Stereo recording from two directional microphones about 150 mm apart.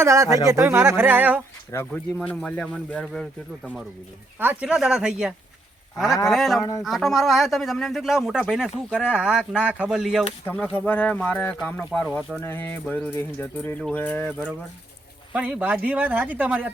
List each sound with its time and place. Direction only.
0.0 s speech: 20° right (ahead or behind)
1.7 s speech: 15° left (ahead or behind)
2.1 s speech: 5° left (ahead or behind)
4.4 s speech: 10° right (ahead or behind)
6.6 s speech: 20° left (ahead or behind)
6.8 s speech: centre (ahead or behind)
10.4 s speech: 10° left (ahead or behind)
15.3 s speech: 10° right (ahead or behind)